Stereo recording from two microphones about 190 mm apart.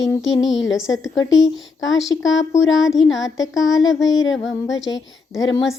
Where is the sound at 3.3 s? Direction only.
20° left (ahead or behind).